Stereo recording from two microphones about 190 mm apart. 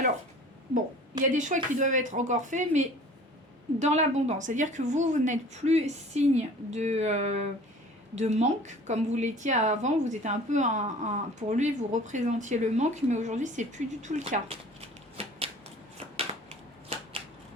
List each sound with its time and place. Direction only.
1.2 s a woman's voice: 40° right (ahead or behind)